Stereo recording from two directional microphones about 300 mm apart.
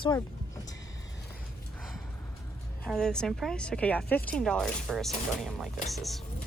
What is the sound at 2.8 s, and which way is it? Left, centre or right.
A woman's voice, centre.